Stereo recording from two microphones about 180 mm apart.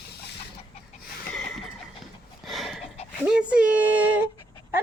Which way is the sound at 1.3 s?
5° left (ahead or behind).